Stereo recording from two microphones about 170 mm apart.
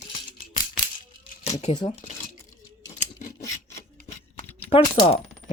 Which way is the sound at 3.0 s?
50° left (ahead or behind).